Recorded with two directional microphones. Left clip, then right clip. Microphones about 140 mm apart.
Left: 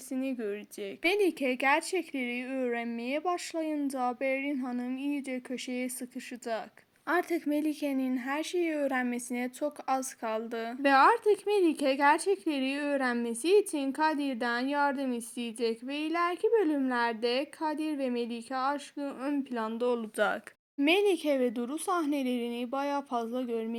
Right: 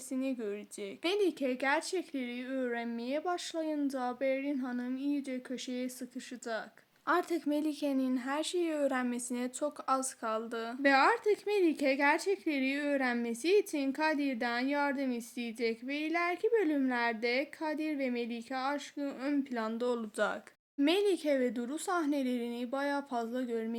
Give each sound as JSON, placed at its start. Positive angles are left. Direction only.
{"t": 0.1, "sound": "speech", "side_deg": 30}
{"t": 7.1, "sound": "speech", "side_deg": 20}
{"t": 20.1, "sound": "speech", "side_deg": 35}
{"t": 20.8, "sound": "speech", "side_deg": 20}